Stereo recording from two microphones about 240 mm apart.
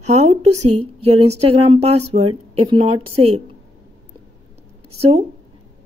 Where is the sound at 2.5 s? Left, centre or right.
Right.